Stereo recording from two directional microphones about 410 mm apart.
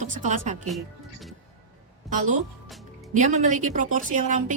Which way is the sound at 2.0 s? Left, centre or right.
Centre.